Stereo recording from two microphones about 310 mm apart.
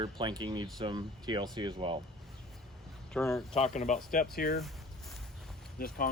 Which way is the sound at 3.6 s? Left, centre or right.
Left.